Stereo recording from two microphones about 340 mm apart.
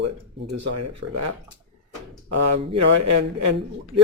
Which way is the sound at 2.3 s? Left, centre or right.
Right.